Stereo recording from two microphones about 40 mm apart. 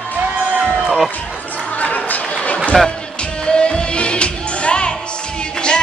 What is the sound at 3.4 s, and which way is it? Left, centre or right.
Music, left.